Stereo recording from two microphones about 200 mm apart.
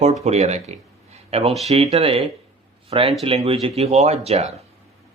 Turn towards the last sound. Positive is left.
turn(degrees=-30)  # may be behind; listen again after turning